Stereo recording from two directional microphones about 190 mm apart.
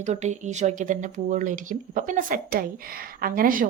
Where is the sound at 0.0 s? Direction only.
40° right (ahead or behind).